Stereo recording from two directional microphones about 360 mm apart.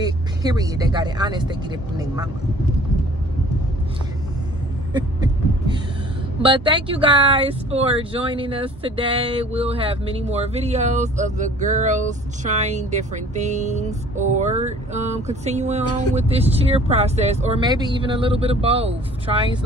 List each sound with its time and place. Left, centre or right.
0.0 s speech: centre
4.9 s speech: centre